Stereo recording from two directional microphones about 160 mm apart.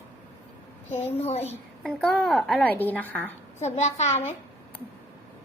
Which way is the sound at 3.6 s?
45° left (ahead or behind).